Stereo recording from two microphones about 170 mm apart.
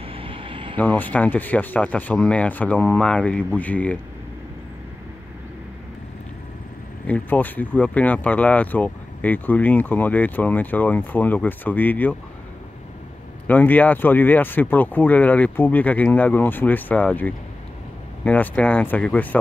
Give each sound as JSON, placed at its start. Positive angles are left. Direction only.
{"t": 0.0, "sound": "vehicle", "side_deg": -30}
{"t": 0.7, "sound": "speech", "side_deg": 10}
{"t": 7.1, "sound": "speech", "side_deg": 10}
{"t": 13.5, "sound": "speech", "side_deg": 10}